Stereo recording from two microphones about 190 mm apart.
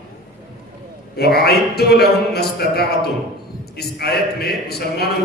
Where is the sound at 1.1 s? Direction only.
55° left (ahead or behind).